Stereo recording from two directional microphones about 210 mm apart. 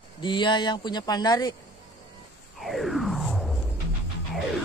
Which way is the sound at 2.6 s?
Centre (ahead or behind).